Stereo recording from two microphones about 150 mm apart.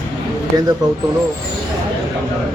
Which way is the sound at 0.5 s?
25° right (ahead or behind).